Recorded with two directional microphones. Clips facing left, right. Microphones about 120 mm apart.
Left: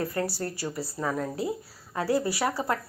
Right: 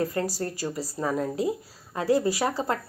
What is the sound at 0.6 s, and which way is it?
Speech, 10° right (ahead or behind).